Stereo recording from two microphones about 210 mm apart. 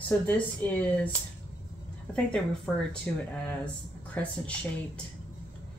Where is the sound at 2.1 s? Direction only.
5° left (ahead or behind).